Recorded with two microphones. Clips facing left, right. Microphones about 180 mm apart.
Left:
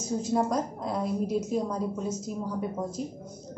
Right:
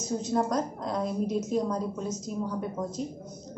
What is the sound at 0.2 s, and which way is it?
A woman's voice, 5° left (ahead or behind).